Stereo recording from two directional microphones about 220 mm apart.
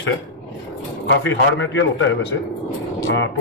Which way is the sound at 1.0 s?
55° left (ahead or behind).